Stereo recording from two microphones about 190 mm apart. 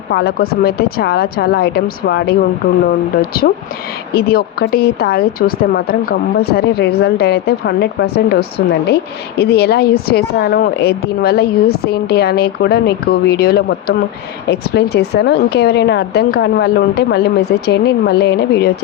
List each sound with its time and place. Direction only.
0.1 s a woman's voice: 55° left (ahead or behind)